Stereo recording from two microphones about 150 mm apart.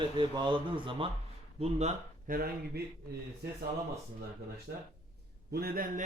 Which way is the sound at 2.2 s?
80° right.